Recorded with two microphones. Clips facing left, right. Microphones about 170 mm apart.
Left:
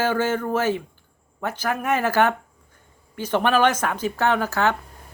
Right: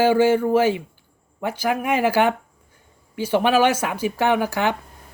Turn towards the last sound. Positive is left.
turn(degrees=-15)  # may be behind; listen again after turning